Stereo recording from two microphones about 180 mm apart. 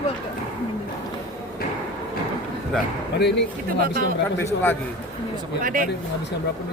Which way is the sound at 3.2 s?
70° left (ahead or behind).